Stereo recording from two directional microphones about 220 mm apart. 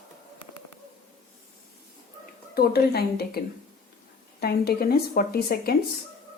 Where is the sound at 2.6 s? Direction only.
45° left (ahead or behind).